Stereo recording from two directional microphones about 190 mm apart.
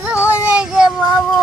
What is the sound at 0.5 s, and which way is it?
Speech, 5° right (ahead or behind).